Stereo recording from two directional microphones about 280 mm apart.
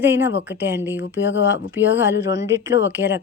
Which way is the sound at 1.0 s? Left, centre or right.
Left.